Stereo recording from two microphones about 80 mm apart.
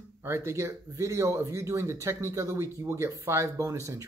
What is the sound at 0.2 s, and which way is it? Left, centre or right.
Speech, right.